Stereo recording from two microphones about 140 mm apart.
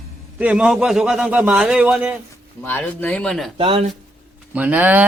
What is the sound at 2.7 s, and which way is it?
Speech, 10° left (ahead or behind).